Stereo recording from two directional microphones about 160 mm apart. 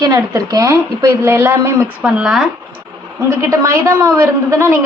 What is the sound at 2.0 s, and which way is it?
Speech, 5° right (ahead or behind).